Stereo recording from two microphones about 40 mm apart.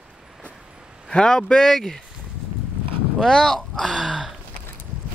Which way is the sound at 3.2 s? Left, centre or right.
Centre.